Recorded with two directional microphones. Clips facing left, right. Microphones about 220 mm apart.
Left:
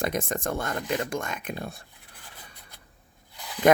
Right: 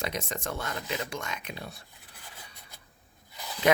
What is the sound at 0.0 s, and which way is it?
Speech, 50° left (ahead or behind).